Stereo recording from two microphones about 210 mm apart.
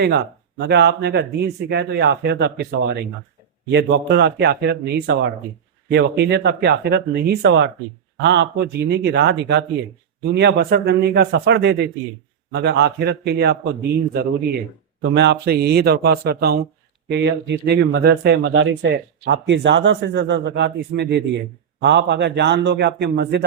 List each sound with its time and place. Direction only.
0.6 s speech: 55° right (ahead or behind)